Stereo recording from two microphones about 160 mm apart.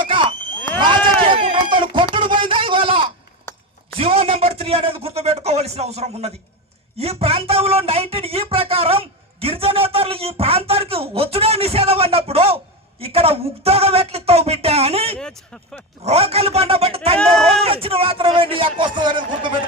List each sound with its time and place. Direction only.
0.0 s a sound: 30° right (ahead or behind)
0.8 s run: 30° right (ahead or behind)
2.1 s a sound: 30° right (ahead or behind)
3.9 s a man's voice: 35° right (ahead or behind)
15.2 s speech: 5° left (ahead or behind)
16.0 s speech: 40° right (ahead or behind)
17.2 s speech: 5° left (ahead or behind)
17.6 s speech: 35° right (ahead or behind)